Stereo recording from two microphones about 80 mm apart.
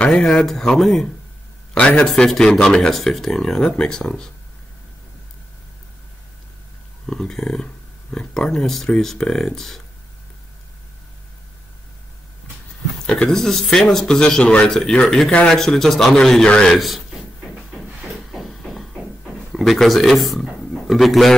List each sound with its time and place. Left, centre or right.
0.0 s a man's voice: centre
1.7 s a man's voice: centre
7.1 s speech: centre
13.0 s a man's voice: centre
16.7 s a sound: centre
19.5 s speech: centre